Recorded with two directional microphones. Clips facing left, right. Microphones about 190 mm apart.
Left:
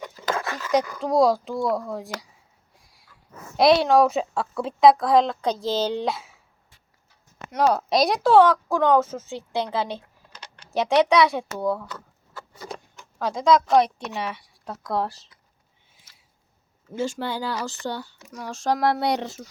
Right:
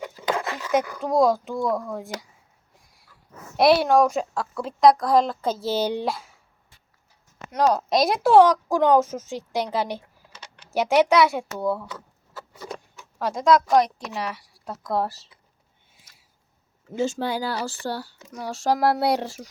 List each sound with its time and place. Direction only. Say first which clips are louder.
0.3 s dog: right 1 dB; 20° right (ahead or behind)
0.9 s speech: left 1 dB; 15° right (ahead or behind)
1.1 s speech: even; centre (ahead or behind)
3.6 s speech: even; centre (ahead or behind)
6.1 s speech: left 1 dB; centre (ahead or behind)
7.5 s speech: even; centre (ahead or behind)
12.5 s a sound: right 1 dB; 5° right (ahead or behind)
13.7 s speech: left 1 dB; centre (ahead or behind)
17.0 s speech: right 2 dB; 10° right (ahead or behind)